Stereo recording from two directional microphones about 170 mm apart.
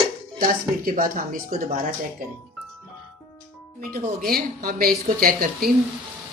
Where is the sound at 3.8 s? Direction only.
60° right (ahead or behind).